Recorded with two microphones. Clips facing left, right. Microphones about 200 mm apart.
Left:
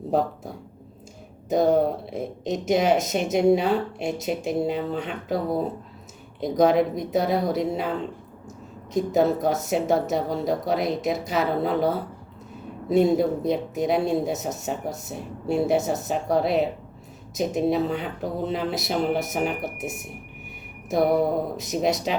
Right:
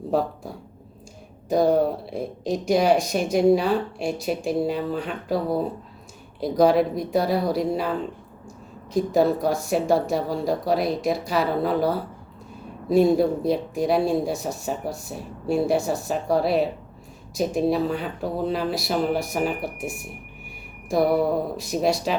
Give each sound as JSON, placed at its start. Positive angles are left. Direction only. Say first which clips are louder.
{"t": 0.1, "sound": "speech", "louder": "even", "side_deg": 20}
{"t": 8.9, "sound": "speech", "louder": "right 1 dB", "side_deg": 20}